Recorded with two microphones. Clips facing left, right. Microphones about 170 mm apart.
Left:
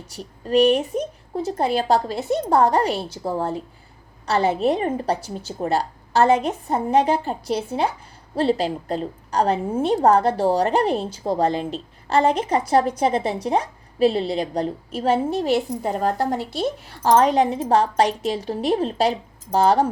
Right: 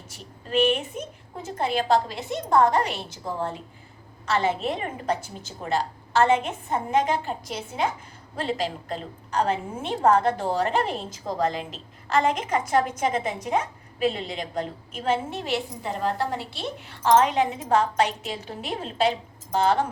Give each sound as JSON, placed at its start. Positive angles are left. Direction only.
{"t": 0.1, "sound": "a woman's voice", "side_deg": 40}